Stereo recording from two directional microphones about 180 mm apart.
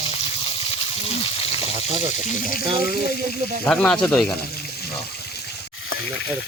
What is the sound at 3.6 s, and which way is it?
Speech, 5° left (ahead or behind).